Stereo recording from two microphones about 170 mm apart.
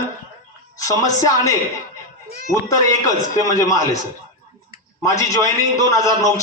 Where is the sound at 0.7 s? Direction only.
20° left (ahead or behind).